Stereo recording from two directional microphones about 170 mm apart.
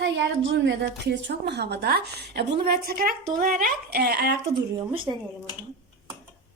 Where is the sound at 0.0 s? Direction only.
90° right; by 4.4 s 70° right (ahead or behind).